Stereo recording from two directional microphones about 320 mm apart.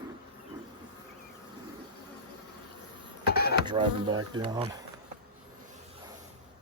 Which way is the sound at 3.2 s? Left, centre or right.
Left.